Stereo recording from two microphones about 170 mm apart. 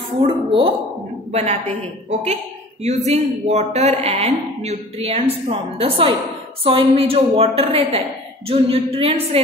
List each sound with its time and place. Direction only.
0.5 s speech: 30° right (ahead or behind)